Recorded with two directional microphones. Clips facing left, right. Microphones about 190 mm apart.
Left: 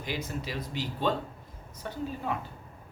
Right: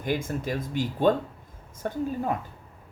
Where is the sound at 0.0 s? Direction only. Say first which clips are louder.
Right 6 dB; 50° right (ahead or behind).